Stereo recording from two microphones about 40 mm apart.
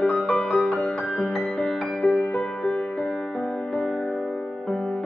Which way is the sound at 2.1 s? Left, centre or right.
Left.